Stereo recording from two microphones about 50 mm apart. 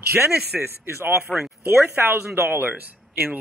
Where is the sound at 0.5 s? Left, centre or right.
Centre.